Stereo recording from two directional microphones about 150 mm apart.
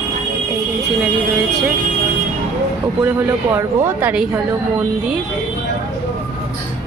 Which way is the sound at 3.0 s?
15° right (ahead or behind).